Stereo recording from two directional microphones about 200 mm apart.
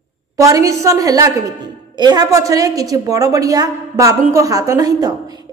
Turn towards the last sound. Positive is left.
turn(degrees=-20)  # may be behind; listen again after turning